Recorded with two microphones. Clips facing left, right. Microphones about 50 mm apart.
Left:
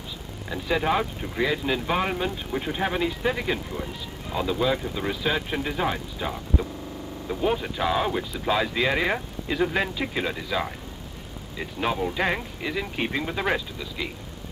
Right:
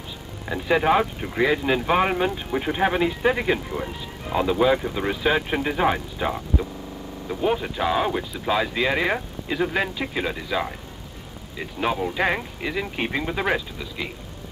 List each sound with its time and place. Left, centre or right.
0.5 s speech: centre
7.2 s speech: centre